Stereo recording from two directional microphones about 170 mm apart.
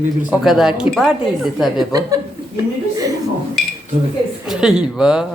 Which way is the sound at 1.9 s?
20° right (ahead or behind).